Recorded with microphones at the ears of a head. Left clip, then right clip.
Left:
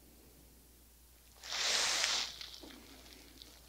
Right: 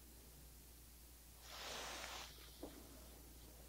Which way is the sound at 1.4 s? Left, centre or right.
Left.